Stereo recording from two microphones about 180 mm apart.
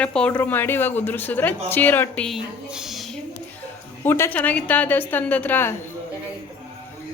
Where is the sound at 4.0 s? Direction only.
10° left (ahead or behind).